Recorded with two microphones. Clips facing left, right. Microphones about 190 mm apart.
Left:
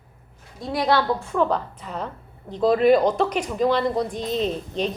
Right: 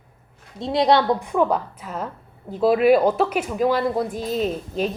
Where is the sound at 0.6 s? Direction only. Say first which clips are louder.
Right 4 dB; 25° right (ahead or behind).